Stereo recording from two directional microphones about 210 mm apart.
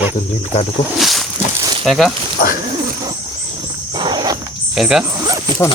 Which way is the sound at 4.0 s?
20° right (ahead or behind).